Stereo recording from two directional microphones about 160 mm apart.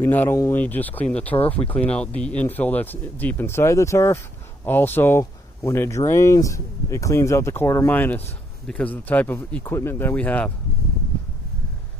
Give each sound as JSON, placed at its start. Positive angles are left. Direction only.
{"t": 0.0, "sound": "speech", "side_deg": 15}